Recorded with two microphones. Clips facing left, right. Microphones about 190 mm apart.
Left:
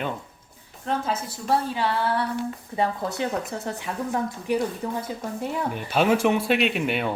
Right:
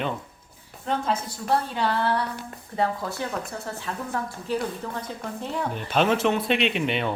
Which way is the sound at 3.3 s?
20° left (ahead or behind).